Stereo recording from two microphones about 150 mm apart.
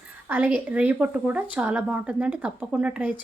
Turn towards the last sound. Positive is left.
turn(degrees=-10)  # may be behind; listen again after turning